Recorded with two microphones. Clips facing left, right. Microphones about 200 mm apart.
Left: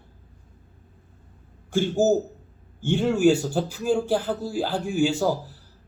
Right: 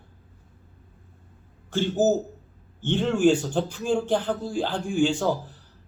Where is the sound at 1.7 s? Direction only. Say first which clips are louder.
Left 1 dB; 10° left (ahead or behind).